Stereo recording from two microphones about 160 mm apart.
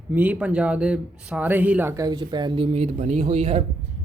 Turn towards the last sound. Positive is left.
turn(degrees=-40)  # may be behind; listen again after turning